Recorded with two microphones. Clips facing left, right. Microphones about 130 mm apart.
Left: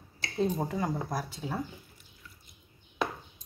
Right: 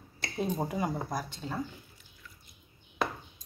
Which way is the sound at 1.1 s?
5° left (ahead or behind).